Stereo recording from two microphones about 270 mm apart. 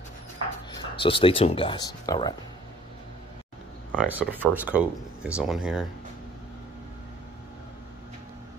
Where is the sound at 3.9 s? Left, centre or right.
Centre.